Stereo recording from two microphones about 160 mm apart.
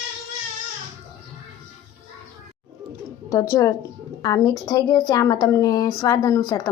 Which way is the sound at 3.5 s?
20° left (ahead or behind).